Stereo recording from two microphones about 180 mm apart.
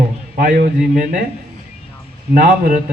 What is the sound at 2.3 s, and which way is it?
Speech, 50° right (ahead or behind).